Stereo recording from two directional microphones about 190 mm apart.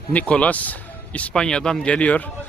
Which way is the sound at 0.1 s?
5° left (ahead or behind).